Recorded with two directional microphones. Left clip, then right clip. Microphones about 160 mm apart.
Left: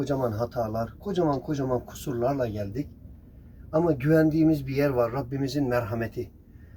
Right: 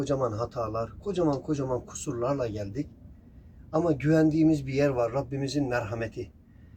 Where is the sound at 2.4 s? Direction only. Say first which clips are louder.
Left 2 dB; 20° right (ahead or behind).